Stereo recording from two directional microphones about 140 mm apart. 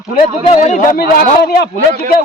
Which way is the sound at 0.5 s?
60° left (ahead or behind).